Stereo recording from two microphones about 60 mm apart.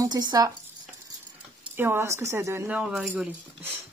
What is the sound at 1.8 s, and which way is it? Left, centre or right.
Speech, right.